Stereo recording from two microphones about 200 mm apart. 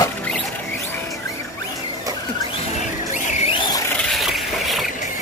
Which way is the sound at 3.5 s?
20° left (ahead or behind).